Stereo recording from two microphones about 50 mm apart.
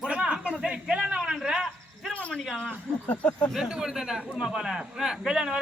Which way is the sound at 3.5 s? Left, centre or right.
Centre.